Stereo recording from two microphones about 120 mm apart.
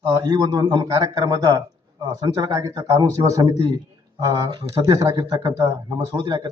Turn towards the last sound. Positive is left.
turn(degrees=-35)  # may be behind; listen again after turning